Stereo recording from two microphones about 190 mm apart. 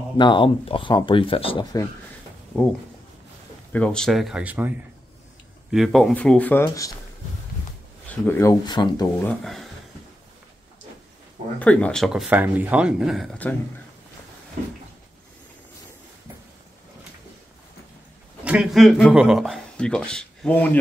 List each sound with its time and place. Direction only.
0.2 s speech: 25° left (ahead or behind)
3.7 s speech: 5° left (ahead or behind)
8.1 s speech: 15° left (ahead or behind)
9.3 s speech: centre (ahead or behind)
11.6 s speech: 5° left (ahead or behind)
18.4 s speech: 5° right (ahead or behind)